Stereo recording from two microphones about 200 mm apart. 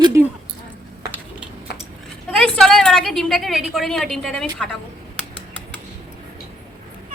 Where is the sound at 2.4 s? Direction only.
Centre (ahead or behind).